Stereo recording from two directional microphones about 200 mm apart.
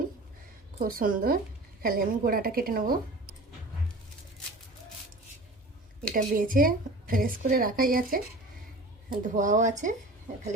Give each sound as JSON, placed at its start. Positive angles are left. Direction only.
{"t": 0.8, "sound": "a woman's voice", "side_deg": -45}
{"t": 6.0, "sound": "a woman's voice", "side_deg": -45}
{"t": 9.2, "sound": "speech", "side_deg": -40}